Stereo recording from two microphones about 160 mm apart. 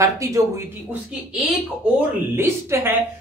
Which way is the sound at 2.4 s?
15° right (ahead or behind).